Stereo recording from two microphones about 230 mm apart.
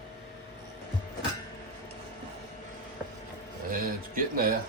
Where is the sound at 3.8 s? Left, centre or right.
Right.